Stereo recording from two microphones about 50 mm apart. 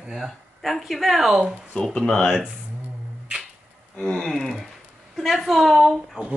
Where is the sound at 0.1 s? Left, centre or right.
Centre.